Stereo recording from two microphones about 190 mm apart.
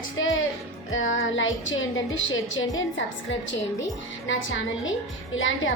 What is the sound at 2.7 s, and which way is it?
A woman's voice, 75° left (ahead or behind).